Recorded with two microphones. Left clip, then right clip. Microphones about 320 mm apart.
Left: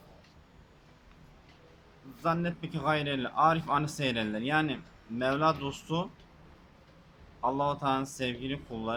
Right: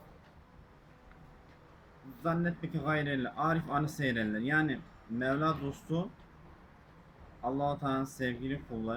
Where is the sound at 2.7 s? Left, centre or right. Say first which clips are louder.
Left 4 dB; centre.